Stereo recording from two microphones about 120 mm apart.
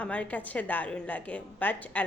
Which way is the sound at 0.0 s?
10° left (ahead or behind).